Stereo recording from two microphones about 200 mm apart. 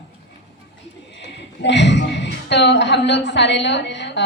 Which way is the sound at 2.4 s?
60° left (ahead or behind).